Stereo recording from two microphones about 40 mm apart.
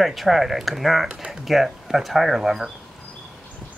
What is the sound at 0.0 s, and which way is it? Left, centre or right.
Speech, centre.